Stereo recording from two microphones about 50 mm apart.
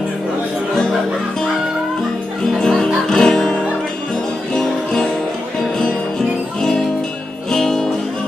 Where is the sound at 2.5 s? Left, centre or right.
Centre.